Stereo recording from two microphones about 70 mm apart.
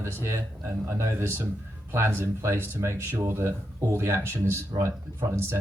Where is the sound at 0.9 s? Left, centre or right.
Right.